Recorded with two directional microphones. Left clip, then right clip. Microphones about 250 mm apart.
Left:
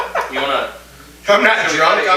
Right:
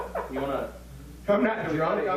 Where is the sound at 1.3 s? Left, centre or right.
Centre.